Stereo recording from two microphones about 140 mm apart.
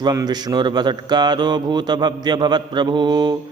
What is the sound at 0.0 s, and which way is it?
A man's voice, 30° right (ahead or behind).